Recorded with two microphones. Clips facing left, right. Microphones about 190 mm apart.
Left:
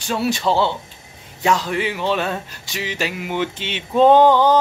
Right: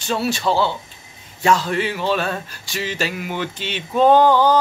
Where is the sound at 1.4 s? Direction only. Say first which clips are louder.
Right 1 dB; 15° left (ahead or behind).